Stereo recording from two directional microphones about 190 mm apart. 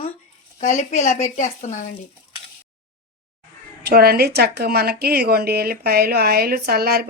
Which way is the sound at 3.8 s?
55° right (ahead or behind).